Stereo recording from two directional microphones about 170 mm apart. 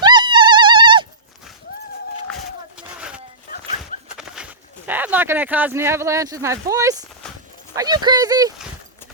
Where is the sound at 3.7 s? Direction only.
Centre (ahead or behind).